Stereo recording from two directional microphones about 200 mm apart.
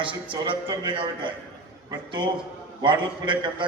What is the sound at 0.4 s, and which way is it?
A man's voice, 25° right (ahead or behind).